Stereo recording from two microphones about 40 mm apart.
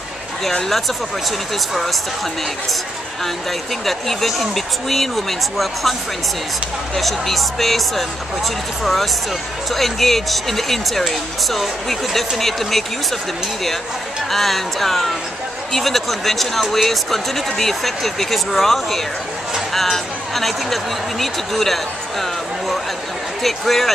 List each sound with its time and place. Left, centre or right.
1.7 s speech: centre
3.8 s speech: centre
7.0 s speech: centre
14.3 s speech: centre
23.4 s speech: centre